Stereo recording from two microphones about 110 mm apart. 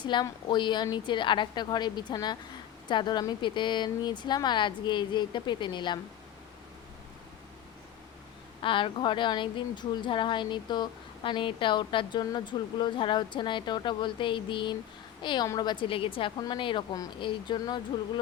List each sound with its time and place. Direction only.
0.0 s speech: 45° left (ahead or behind)
8.6 s speech: 50° left (ahead or behind)